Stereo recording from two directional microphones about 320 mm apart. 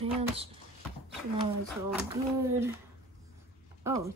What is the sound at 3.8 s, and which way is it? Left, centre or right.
Speech, centre.